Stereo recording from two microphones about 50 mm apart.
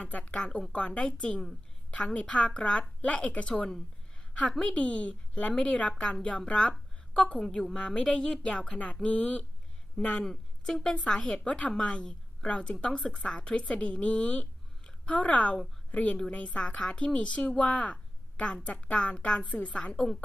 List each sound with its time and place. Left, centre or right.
0.0 s a woman's voice: left
4.6 s a woman's voice: centre
5.9 s a woman's voice: centre
7.8 s a woman's voice: left
10.2 s a woman's voice: centre
13.0 s a woman's voice: centre
13.2 s a woman's voice: centre
16.8 s a woman's voice: centre